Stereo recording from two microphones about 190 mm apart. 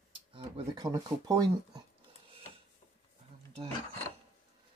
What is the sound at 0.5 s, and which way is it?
Speech, 20° right (ahead or behind).